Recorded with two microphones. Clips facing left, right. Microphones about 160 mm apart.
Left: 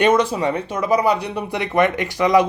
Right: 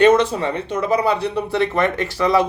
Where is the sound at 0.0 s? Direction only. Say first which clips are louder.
Right 2 dB; 10° left (ahead or behind).